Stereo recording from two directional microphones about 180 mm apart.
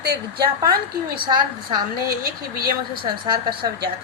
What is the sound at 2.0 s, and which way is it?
Speech, 55° right (ahead or behind).